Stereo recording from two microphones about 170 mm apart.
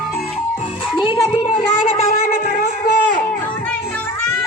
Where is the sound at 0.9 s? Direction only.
30° left (ahead or behind).